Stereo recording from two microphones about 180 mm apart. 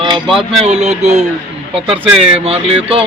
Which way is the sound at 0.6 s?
35° right (ahead or behind).